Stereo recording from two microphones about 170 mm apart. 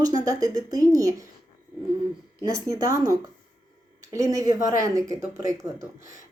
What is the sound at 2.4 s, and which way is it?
Speech, 20° right (ahead or behind).